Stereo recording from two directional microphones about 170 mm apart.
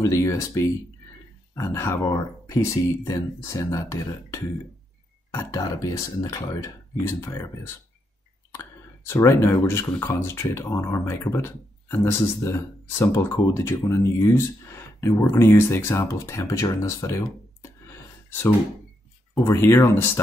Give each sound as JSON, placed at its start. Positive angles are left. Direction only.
{"t": 0.0, "sound": "speech", "side_deg": 20}
{"t": 17.6, "sound": "a sound", "side_deg": 15}
{"t": 19.4, "sound": "speech", "side_deg": 15}